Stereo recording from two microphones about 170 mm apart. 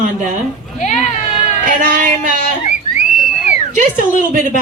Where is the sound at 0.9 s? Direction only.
45° left (ahead or behind).